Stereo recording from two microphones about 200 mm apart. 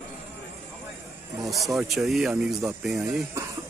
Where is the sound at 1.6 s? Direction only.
Centre (ahead or behind).